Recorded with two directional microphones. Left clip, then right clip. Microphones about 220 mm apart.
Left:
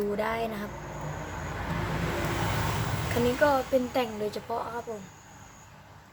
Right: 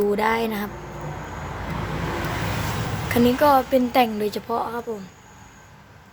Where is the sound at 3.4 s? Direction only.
45° right (ahead or behind).